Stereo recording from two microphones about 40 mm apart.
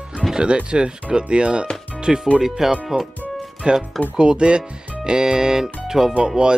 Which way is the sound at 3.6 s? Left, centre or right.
Right.